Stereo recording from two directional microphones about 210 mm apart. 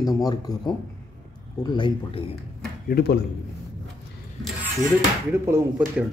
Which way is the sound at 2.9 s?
50° left (ahead or behind).